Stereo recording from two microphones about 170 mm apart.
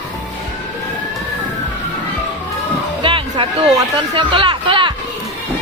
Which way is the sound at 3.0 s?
30° right (ahead or behind).